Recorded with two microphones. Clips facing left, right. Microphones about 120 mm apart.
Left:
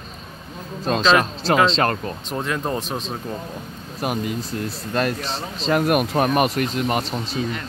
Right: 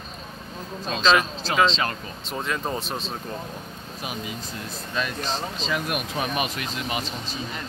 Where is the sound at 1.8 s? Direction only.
50° left (ahead or behind).